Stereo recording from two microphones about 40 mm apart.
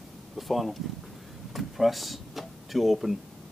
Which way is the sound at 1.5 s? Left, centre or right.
Centre.